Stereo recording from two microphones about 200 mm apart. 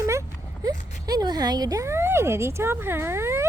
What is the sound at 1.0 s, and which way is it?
Speech, 20° right (ahead or behind).